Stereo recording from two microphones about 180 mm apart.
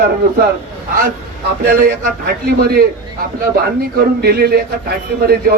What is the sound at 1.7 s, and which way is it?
A man's voice, 55° right (ahead or behind).